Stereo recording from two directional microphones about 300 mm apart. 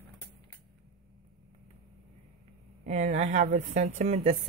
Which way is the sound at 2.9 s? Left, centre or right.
Right.